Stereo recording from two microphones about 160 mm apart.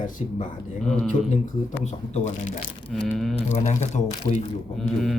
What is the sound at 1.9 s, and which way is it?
Speech, 50° left (ahead or behind).